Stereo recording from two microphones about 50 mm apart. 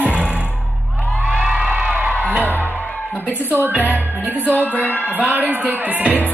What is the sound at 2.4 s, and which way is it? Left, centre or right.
Music, left.